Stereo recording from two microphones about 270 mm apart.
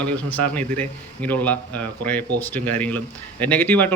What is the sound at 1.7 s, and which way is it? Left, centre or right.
Speech, right.